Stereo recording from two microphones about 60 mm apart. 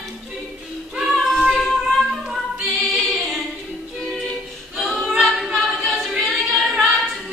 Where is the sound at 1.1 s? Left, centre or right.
Centre.